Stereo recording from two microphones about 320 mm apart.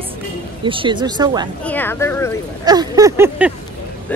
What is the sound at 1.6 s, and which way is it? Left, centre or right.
Speech, centre.